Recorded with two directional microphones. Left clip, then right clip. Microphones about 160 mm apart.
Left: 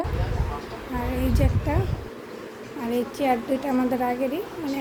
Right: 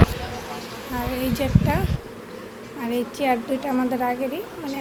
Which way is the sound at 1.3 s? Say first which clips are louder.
Right 3 dB; 10° left (ahead or behind).